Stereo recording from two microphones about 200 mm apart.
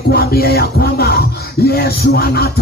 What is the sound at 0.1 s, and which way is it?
Music, 50° left (ahead or behind).